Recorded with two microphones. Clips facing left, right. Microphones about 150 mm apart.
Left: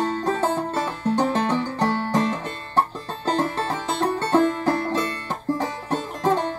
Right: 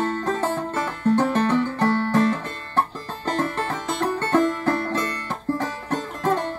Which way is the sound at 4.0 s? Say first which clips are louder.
Left 1 dB; 5° left (ahead or behind).